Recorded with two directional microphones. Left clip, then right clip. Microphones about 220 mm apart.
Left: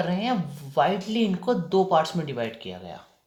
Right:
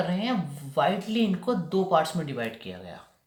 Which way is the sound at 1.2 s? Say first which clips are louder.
Left 2 dB; 30° left (ahead or behind).